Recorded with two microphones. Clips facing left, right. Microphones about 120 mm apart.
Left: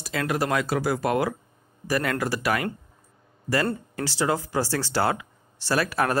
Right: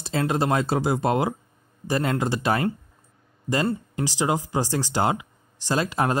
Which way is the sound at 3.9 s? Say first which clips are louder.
Left 1 dB; 15° right (ahead or behind).